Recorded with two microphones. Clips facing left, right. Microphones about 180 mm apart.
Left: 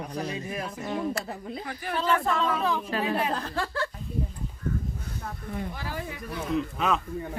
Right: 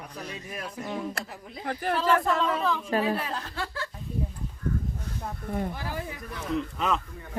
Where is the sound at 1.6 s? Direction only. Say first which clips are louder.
Right 5 dB; 60° right (ahead or behind).